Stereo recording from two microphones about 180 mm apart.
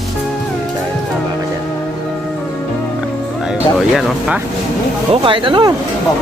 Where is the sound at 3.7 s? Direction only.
5° right (ahead or behind).